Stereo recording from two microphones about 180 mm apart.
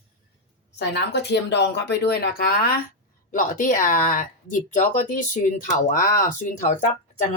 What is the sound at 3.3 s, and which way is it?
Speech, 45° left (ahead or behind).